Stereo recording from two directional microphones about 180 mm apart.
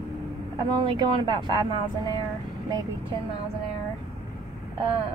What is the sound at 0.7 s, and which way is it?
Speech, 25° right (ahead or behind).